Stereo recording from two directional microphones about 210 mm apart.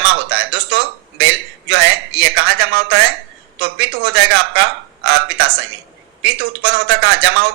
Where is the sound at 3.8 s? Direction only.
60° right (ahead or behind).